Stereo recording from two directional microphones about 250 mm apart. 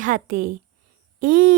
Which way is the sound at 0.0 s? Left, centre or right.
Right.